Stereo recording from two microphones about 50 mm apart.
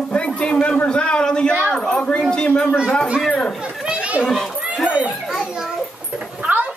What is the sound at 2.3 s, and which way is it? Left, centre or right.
A man's voice, centre.